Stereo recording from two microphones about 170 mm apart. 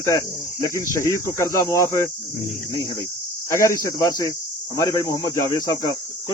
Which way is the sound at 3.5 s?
20° left (ahead or behind).